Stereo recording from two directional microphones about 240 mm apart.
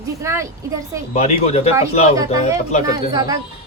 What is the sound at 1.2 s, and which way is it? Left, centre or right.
Speech, left.